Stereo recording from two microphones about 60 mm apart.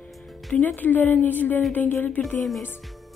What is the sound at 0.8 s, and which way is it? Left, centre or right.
Speech, left.